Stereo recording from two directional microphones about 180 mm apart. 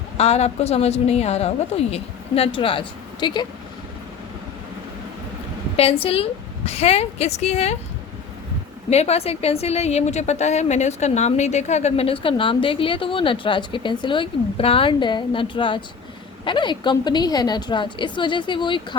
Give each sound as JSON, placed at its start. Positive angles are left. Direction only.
{"t": 0.2, "sound": "a woman's voice", "side_deg": 35}
{"t": 5.7, "sound": "a woman's voice", "side_deg": 30}
{"t": 8.9, "sound": "a woman's voice", "side_deg": 35}